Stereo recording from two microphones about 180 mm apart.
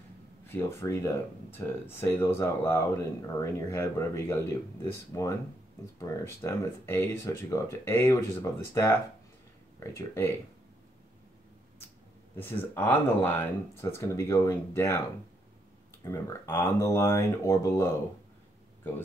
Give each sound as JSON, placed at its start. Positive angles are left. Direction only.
{"t": 0.5, "sound": "speech", "side_deg": 15}
{"t": 9.9, "sound": "speech", "side_deg": 15}
{"t": 12.4, "sound": "speech", "side_deg": 10}
{"t": 16.0, "sound": "speech", "side_deg": 15}